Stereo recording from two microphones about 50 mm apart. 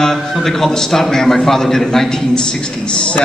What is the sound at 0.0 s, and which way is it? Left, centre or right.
A man's voice, centre.